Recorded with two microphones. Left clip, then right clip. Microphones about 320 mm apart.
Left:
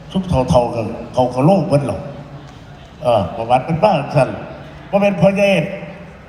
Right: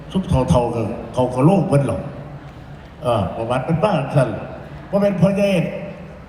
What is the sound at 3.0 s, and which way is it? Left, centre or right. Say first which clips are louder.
A man's voice: left 4 dB; centre.